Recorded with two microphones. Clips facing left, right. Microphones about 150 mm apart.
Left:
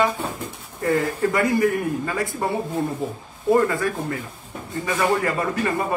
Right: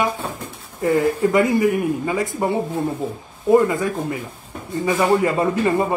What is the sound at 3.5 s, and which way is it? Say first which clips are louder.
A man's voice: right 6 dB; 20° right (ahead or behind).